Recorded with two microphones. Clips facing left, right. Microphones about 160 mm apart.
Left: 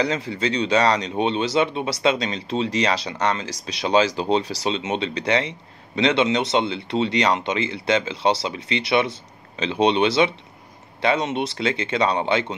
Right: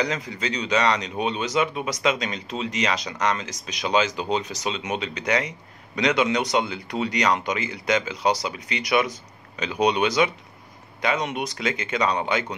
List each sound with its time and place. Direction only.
0.0 s speech: 30° left (ahead or behind)